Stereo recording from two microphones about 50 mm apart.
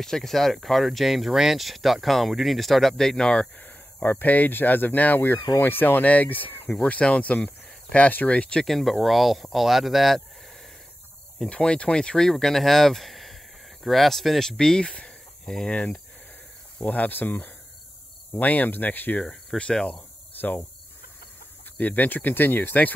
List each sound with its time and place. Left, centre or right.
0.0 s speech: centre
3.5 s speech: left
6.0 s speech: left
6.7 s speech: left
8.6 s speech: centre
11.4 s speech: centre
14.6 s speech: centre
15.7 s speech: left
19.6 s speech: centre
19.9 s cricket: left
21.7 s speech: left